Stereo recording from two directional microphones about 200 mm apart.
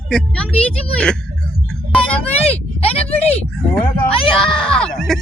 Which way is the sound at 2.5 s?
30° left (ahead or behind).